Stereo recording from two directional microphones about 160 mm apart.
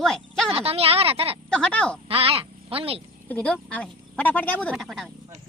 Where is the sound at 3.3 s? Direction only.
10° left (ahead or behind).